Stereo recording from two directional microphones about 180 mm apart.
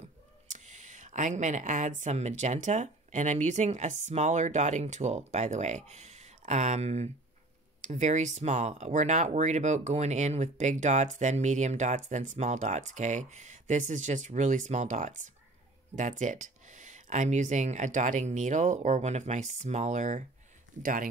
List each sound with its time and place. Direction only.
0.5 s speech: 40° right (ahead or behind)